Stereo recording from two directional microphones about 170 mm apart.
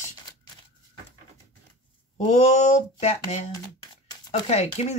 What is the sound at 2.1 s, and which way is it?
Speech, 45° left (ahead or behind).